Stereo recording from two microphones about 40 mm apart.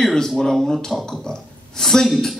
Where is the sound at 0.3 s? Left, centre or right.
Centre.